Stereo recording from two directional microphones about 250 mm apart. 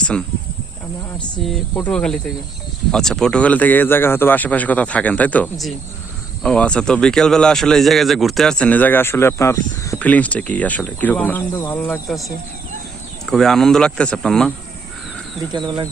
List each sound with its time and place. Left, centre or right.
0.0 s speech: centre
1.5 s speech: centre
13.3 s speech: centre
15.5 s speech: centre